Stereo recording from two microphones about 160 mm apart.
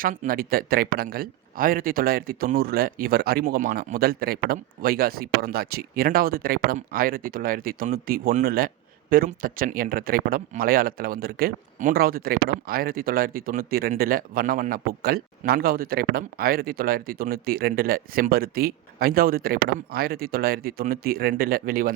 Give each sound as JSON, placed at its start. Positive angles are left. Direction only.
{"t": 0.0, "sound": "a man's voice", "side_deg": -65}